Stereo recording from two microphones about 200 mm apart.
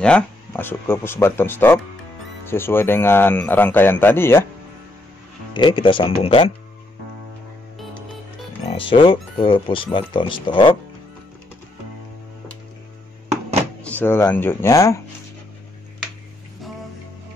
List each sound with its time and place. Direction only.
0.0 s speech: 5° left (ahead or behind)
5.5 s speech: 25° left (ahead or behind)
8.6 s speech: 25° left (ahead or behind)
13.8 s speech: 10° left (ahead or behind)